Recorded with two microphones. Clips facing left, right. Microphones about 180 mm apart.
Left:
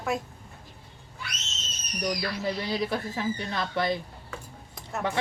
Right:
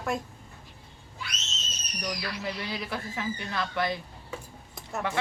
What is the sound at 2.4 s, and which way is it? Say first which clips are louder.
Speech: left 7 dB; 35° left (ahead or behind).